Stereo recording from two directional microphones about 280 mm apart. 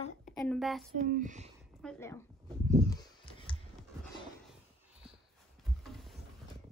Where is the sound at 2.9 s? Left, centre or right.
Centre.